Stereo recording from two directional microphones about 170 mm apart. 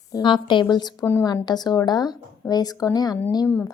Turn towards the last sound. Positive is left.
turn(degrees=15)  # may be behind; listen again after turning